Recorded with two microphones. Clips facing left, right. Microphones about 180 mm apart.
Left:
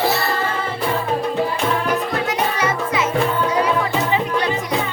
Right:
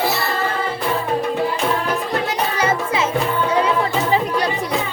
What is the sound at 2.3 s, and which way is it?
Music, 30° right (ahead or behind).